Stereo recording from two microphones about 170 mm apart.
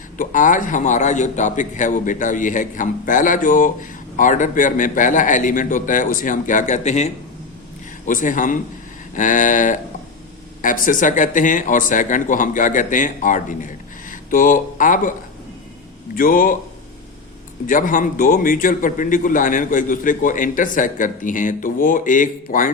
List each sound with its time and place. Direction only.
0.2 s a man's voice: 50° left (ahead or behind)
16.1 s a man's voice: 55° left (ahead or behind)
17.7 s a man's voice: 50° left (ahead or behind)